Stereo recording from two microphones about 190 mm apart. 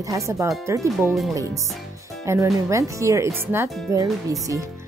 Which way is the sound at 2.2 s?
15° right (ahead or behind).